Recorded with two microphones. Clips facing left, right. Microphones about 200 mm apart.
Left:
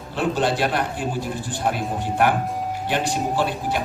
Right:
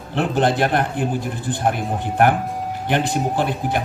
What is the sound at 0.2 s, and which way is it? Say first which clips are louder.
A man's voice: right 3 dB; 55° right (ahead or behind).